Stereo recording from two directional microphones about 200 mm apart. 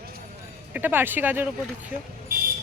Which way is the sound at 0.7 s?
10° right (ahead or behind).